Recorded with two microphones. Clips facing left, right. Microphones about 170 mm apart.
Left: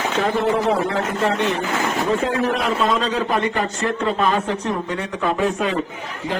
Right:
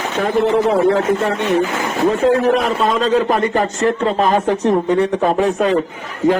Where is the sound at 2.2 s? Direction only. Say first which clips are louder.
Right 7 dB; 45° right (ahead or behind).